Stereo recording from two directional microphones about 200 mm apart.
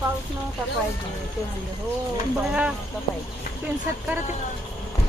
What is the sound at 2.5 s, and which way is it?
Speech, 5° right (ahead or behind).